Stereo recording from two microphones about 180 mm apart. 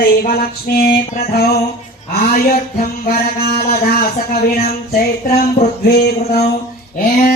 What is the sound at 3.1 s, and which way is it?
Child singing, 60° left (ahead or behind).